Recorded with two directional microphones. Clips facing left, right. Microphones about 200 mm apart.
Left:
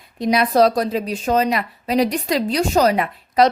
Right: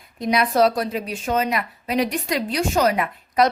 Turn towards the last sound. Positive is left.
turn(degrees=35)  # may be behind; listen again after turning